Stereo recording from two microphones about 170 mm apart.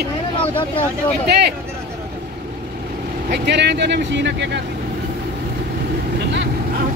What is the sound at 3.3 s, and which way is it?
Speech, 90° right.